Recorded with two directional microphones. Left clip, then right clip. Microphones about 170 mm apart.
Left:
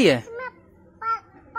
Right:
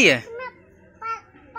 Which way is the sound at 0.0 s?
25° left (ahead or behind).